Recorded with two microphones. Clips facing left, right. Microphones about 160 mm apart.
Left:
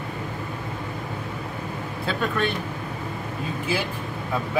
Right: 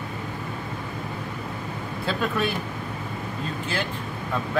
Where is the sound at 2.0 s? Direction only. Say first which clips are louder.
Even; 5° right (ahead or behind).